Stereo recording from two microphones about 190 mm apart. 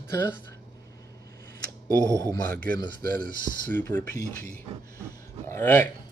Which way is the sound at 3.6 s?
10° left (ahead or behind).